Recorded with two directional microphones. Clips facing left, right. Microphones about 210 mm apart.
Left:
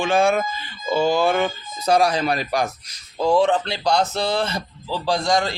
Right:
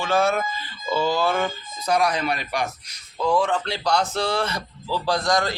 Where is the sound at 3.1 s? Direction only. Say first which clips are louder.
Left 4 dB; 30° left (ahead or behind).